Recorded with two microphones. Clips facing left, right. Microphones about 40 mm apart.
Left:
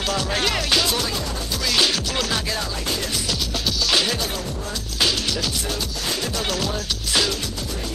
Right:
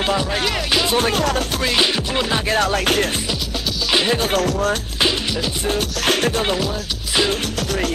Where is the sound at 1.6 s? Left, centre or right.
Right.